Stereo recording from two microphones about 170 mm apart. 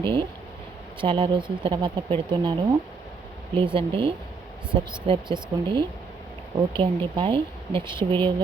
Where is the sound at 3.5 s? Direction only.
30° right (ahead or behind).